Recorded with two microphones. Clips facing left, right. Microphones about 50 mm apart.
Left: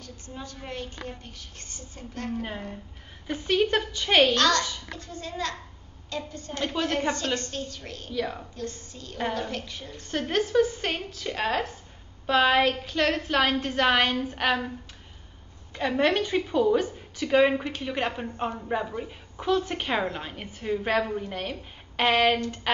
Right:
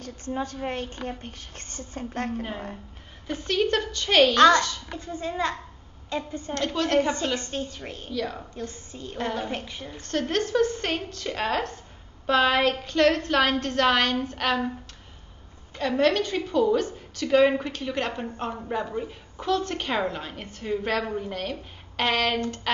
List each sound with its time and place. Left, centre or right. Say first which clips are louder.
0.0 s a woman's voice: right 9 dB; right
3.3 s a woman's voice: even; centre
4.4 s a woman's voice: right 6 dB; right
6.5 s a woman's voice: right 2 dB; centre
7.3 s a woman's voice: right 2 dB; centre
8.1 s a woman's voice: even; centre
8.5 s a woman's voice: even; centre
10.0 s a woman's voice: right 1 dB; centre
15.7 s a woman's voice: right 1 dB; centre